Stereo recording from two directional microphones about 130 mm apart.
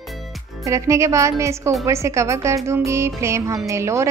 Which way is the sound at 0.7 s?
25° right (ahead or behind).